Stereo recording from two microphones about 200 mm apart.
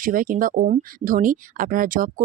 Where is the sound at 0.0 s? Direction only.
45° right (ahead or behind).